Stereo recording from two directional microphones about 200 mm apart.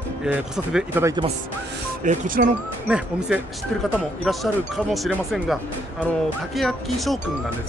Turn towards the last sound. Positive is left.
turn(degrees=0)  # may be behind; listen again after turning